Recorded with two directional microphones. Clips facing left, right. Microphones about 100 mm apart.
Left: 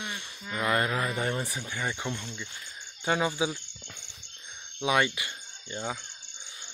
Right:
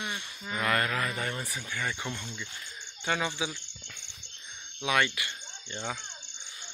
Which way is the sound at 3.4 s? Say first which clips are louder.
Left 5 dB; 25° left (ahead or behind).